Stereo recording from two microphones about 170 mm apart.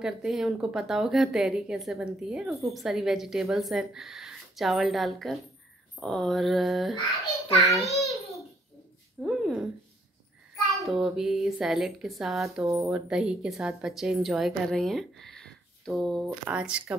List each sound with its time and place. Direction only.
0.0 s a woman's voice: centre (ahead or behind)
9.2 s a sound: 5° right (ahead or behind)
10.5 s a woman's voice: centre (ahead or behind)
12.6 s speech: 20° right (ahead or behind)
12.9 s a woman's voice: 5° right (ahead or behind)